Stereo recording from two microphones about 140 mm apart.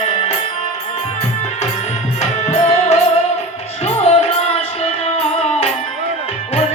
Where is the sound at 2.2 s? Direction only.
50° left (ahead or behind).